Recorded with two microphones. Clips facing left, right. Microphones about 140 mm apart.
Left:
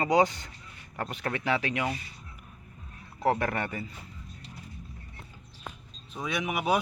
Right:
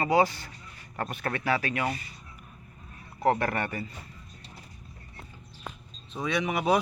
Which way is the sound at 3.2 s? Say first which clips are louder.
Right 1 dB; 15° left (ahead or behind).